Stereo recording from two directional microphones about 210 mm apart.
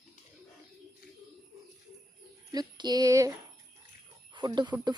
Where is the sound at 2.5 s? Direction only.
20° right (ahead or behind).